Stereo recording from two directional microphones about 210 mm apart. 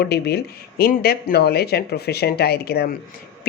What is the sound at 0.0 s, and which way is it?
A woman's voice, 50° left (ahead or behind).